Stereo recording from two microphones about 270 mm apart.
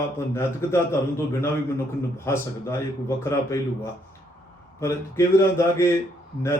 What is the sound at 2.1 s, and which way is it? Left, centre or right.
A man's voice, centre.